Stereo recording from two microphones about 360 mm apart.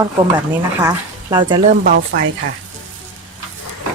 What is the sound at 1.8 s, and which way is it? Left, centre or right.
Speech, right.